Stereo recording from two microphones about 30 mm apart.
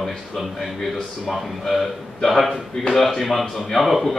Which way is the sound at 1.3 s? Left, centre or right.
Centre.